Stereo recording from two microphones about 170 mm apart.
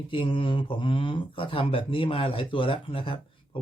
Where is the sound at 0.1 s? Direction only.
30° left (ahead or behind).